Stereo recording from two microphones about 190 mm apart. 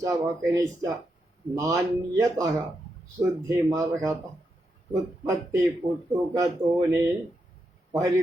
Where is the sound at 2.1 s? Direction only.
15° right (ahead or behind).